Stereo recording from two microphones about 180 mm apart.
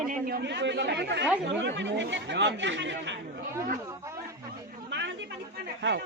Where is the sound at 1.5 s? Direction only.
80° right.